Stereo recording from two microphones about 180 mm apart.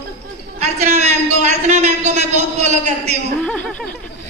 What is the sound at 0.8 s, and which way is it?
A man's voice, 40° right (ahead or behind).